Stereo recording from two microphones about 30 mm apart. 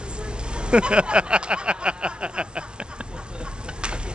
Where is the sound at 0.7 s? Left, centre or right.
Right.